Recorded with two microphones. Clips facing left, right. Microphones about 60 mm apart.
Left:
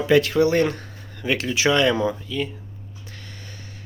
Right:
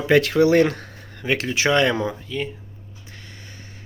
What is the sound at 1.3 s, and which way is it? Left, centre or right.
Speech, right.